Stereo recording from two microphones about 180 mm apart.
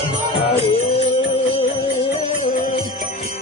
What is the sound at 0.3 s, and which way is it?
Music, 30° left (ahead or behind).